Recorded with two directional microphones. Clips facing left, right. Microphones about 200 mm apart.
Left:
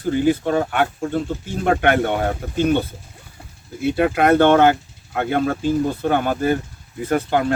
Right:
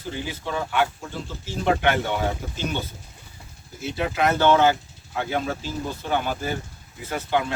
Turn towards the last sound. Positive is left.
turn(degrees=50)  # may be behind; listen again after turning